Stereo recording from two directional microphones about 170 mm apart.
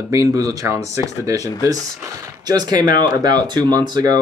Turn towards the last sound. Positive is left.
turn(degrees=-25)  # may be behind; listen again after turning